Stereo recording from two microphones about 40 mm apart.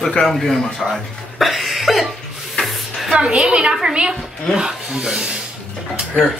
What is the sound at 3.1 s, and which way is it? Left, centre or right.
Speech, right.